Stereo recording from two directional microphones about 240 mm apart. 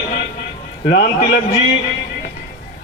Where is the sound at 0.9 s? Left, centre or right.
Left.